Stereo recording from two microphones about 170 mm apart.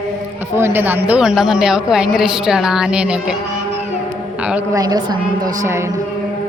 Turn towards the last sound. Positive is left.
turn(degrees=-20)  # may be behind; listen again after turning